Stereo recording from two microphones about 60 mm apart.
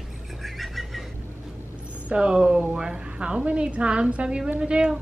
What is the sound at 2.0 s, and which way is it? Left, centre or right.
A woman's voice, centre.